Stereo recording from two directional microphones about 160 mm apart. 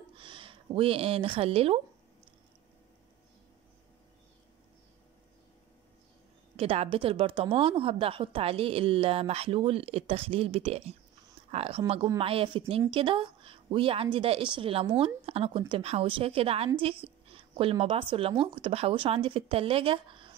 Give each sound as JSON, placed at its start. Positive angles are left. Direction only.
{"t": 0.1, "sound": "speech", "side_deg": -30}
{"t": 6.5, "sound": "a woman's voice", "side_deg": -40}